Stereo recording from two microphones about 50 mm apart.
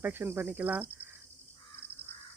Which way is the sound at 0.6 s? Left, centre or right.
Right.